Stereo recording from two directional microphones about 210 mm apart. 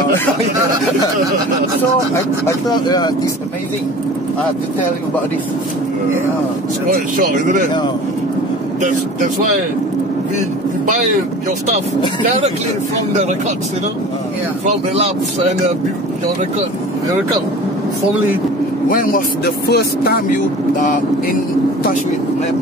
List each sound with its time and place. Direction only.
2.4 s speech: 20° left (ahead or behind)
6.9 s speech: 40° right (ahead or behind)
8.8 s speech: 40° right (ahead or behind)
12.2 s speech: 35° right (ahead or behind)
18.9 s speech: 40° left (ahead or behind)
20.8 s speech: 40° left (ahead or behind)